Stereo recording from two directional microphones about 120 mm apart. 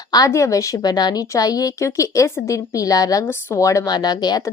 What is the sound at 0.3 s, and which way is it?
A woman's voice, 25° left (ahead or behind).